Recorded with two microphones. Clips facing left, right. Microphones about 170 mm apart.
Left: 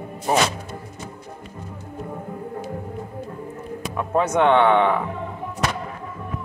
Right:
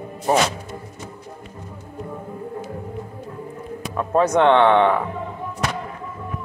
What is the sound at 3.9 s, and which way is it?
Speech, 15° left (ahead or behind).